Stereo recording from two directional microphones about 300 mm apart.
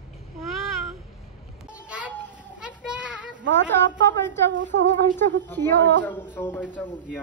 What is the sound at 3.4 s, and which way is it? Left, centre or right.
Speech, right.